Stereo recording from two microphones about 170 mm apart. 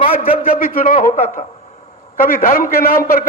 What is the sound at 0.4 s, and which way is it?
Speech, 55° left (ahead or behind).